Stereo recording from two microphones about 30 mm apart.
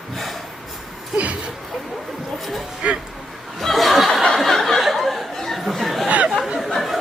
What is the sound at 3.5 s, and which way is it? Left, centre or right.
Chuckle, centre.